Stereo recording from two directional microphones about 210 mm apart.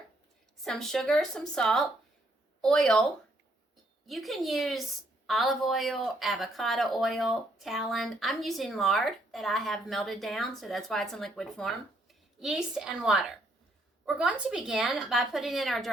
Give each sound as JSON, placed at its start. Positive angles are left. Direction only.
{"t": 0.6, "sound": "a woman's voice", "side_deg": 0}
{"t": 4.0, "sound": "a woman's voice", "side_deg": 0}